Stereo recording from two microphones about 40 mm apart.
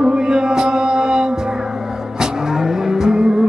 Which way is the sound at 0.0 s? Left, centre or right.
Centre.